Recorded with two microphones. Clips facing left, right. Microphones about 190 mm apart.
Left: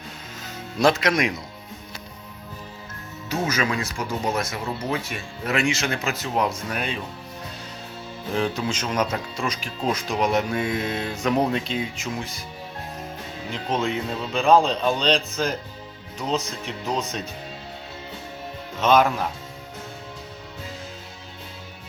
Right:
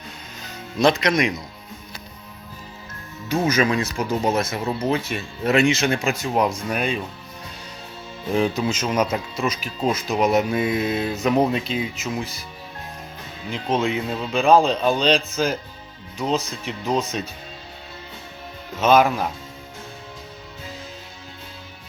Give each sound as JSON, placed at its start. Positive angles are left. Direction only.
{"t": 0.8, "sound": "speech", "side_deg": 5}
{"t": 3.6, "sound": "speech", "side_deg": -20}
{"t": 8.4, "sound": "speech", "side_deg": -10}
{"t": 10.5, "sound": "speech", "side_deg": -20}
{"t": 10.8, "sound": "speech", "side_deg": -5}
{"t": 13.5, "sound": "speech", "side_deg": 0}
{"t": 18.8, "sound": "speech", "side_deg": -10}